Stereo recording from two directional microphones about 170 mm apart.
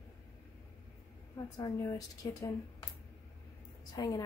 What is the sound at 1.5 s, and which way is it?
Speech, 20° left (ahead or behind).